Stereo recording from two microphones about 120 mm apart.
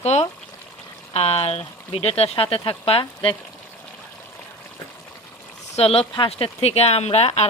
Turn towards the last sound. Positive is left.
turn(degrees=60)  # may be behind; listen again after turning